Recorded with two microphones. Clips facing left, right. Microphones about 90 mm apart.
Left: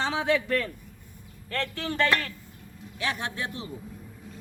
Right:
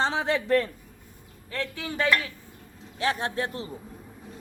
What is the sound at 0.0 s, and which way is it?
Speech, 35° right (ahead or behind).